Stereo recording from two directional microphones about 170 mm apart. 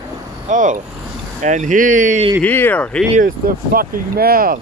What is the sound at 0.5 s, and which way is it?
Speech, 50° right (ahead or behind).